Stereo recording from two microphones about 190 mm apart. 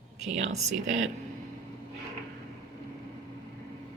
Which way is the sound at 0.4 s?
90° right.